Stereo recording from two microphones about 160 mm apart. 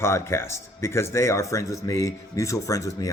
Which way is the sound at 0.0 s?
15° left (ahead or behind).